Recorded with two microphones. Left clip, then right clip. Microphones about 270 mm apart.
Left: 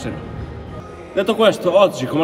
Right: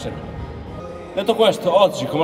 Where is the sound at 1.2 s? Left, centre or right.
Centre.